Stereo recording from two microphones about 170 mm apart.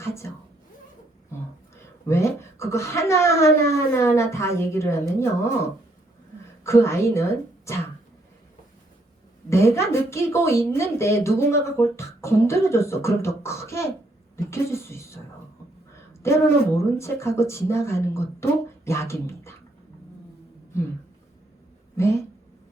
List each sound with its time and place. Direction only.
0.0 s a sound: 15° left (ahead or behind)
2.0 s a woman's voice: 15° left (ahead or behind)
9.5 s speech: 15° left (ahead or behind)
16.2 s speech: 15° left (ahead or behind)